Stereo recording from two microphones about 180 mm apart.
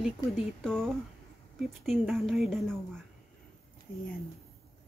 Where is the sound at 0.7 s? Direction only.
5° left (ahead or behind).